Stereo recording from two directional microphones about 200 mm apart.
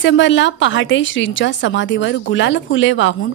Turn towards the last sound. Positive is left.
turn(degrees=70)  # may be behind; listen again after turning